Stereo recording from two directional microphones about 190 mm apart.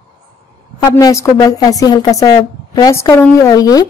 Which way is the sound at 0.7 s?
20° left (ahead or behind).